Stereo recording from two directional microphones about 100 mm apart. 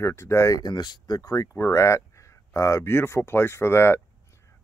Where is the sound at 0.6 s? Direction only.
50° left (ahead or behind); by 4.0 s 25° left (ahead or behind).